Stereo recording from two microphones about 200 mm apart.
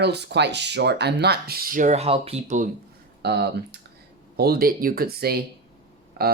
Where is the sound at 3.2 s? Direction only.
55° right (ahead or behind).